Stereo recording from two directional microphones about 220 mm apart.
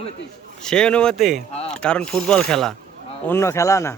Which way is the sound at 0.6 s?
5° left (ahead or behind).